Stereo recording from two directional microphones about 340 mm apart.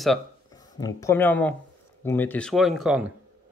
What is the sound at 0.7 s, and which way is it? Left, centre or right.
Speech, centre.